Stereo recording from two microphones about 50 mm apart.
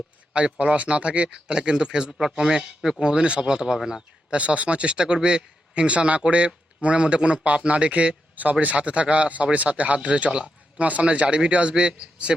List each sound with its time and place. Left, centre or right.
0.6 s a man's voice: right
4.4 s speech: right